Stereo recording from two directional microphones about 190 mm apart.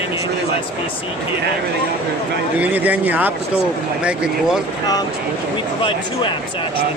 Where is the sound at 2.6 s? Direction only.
10° right (ahead or behind).